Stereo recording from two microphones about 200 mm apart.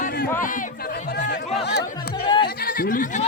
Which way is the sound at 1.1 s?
60° left (ahead or behind).